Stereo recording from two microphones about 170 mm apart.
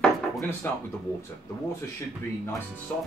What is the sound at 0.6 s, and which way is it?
Speech, 10° left (ahead or behind).